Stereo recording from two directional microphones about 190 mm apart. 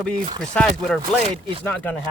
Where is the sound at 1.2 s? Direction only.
30° right (ahead or behind).